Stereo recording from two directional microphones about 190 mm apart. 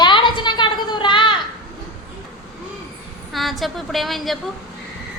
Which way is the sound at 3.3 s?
Centre (ahead or behind).